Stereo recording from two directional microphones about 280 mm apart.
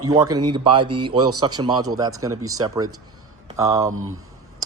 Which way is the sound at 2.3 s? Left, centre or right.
Right.